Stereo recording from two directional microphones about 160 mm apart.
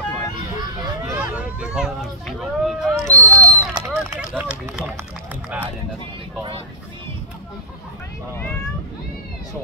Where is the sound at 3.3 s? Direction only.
20° right (ahead or behind).